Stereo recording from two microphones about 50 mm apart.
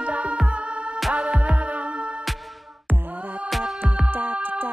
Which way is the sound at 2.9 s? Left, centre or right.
Right.